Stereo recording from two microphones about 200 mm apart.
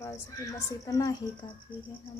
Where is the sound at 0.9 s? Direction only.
15° left (ahead or behind).